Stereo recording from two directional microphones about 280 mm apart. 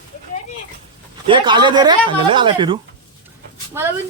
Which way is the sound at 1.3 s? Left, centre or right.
Centre.